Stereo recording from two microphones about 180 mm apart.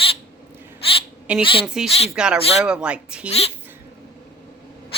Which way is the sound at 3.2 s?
35° left (ahead or behind).